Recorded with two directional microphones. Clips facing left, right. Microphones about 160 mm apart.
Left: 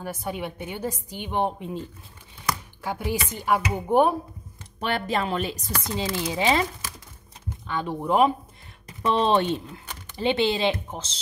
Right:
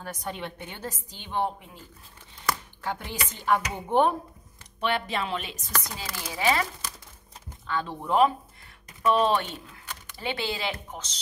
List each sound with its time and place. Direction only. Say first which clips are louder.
0.0 s a woman's voice: left 4 dB; 10° left (ahead or behind)
2.8 s a woman's voice: left 5 dB; 10° left (ahead or behind)
4.7 s speech: left 2 dB; 40° left (ahead or behind)
5.9 s speech: left 8 dB; 25° left (ahead or behind)
7.6 s a woman's voice: left 3 dB; 15° left (ahead or behind)
8.8 s speech: even; 25° left (ahead or behind)